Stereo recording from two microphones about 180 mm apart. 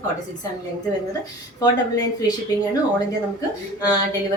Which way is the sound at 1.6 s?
20° left (ahead or behind).